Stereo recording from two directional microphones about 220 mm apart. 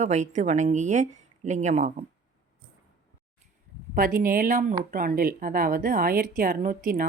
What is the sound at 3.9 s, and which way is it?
Speech, 40° right (ahead or behind).